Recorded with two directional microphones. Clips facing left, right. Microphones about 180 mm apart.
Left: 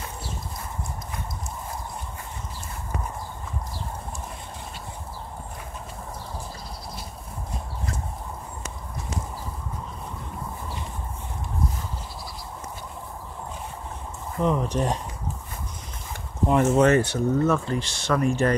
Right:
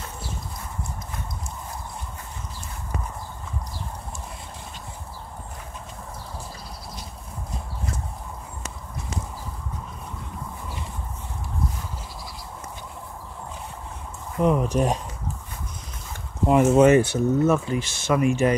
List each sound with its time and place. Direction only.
14.4 s speech: 15° right (ahead or behind)
16.4 s speech: 25° right (ahead or behind)
16.8 s speech: 10° right (ahead or behind)